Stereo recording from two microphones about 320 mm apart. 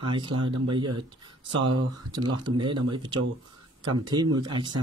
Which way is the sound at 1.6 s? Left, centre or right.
Right.